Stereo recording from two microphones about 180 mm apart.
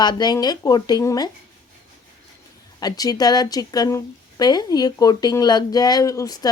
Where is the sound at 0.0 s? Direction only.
25° left (ahead or behind).